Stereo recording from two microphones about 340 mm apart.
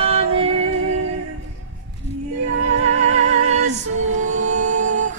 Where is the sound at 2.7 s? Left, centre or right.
Right.